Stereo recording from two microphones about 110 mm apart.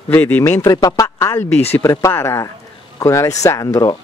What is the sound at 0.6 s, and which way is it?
Speech, 35° left (ahead or behind).